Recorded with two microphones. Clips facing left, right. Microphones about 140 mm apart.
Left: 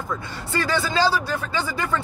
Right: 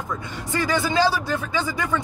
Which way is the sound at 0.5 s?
15° right (ahead or behind).